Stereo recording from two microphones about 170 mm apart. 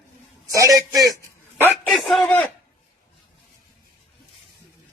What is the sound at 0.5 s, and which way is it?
A man's voice, 20° right (ahead or behind).